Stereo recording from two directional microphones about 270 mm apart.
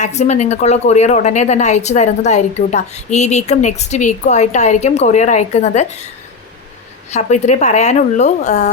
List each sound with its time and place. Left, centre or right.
0.0 s a woman's voice: left
7.1 s a woman's voice: left